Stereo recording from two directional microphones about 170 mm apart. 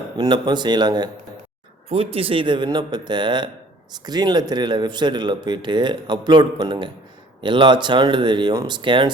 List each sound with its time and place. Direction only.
0.2 s a man's voice: 25° right (ahead or behind)
1.9 s a man's voice: 35° right (ahead or behind)